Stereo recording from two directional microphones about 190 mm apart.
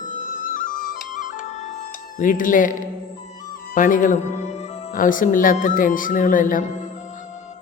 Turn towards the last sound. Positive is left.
turn(degrees=45)  # may be behind; listen again after turning